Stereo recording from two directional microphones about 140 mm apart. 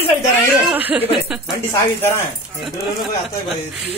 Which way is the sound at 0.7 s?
10° right (ahead or behind).